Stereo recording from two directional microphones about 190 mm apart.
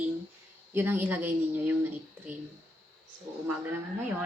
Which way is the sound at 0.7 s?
10° right (ahead or behind).